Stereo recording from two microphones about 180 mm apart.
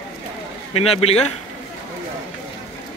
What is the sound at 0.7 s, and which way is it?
Speech, 35° left (ahead or behind).